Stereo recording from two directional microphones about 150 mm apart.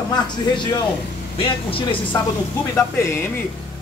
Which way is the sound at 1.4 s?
35° left (ahead or behind).